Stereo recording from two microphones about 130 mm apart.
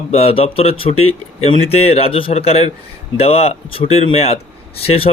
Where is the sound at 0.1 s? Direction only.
50° left (ahead or behind).